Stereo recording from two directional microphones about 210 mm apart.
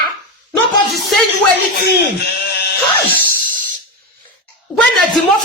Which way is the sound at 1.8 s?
50° left (ahead or behind).